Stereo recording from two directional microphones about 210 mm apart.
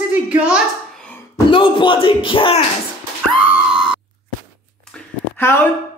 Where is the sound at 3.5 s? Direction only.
5° right (ahead or behind).